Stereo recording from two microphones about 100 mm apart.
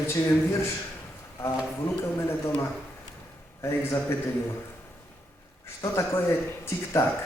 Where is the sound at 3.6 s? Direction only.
30° left (ahead or behind).